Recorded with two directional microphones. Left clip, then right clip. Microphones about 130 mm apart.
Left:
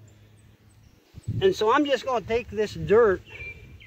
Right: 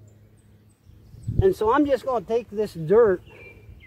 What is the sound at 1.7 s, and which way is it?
Speech, 10° left (ahead or behind).